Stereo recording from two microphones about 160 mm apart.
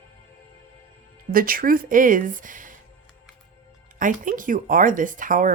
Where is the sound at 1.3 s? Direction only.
65° right (ahead or behind).